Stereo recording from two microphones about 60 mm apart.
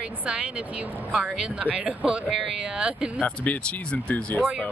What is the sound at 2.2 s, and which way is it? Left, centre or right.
A woman's voice, centre.